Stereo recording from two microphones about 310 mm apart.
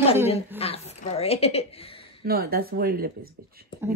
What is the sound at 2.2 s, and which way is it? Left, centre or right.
Speech, right.